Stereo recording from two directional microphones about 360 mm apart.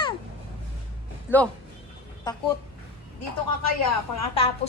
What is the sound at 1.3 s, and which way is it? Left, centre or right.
Speech, centre.